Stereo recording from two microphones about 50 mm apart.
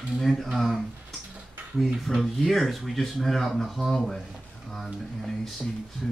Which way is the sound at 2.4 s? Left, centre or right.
Centre.